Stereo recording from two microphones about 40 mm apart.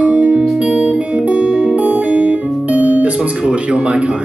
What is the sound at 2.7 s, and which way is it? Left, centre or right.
Guitar, right.